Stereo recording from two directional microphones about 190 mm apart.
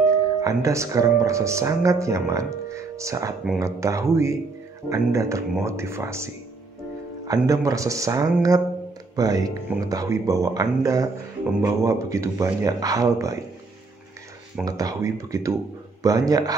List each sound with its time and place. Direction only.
0.0 s a man's voice: 15° right (ahead or behind)
14.6 s a man's voice: 20° right (ahead or behind)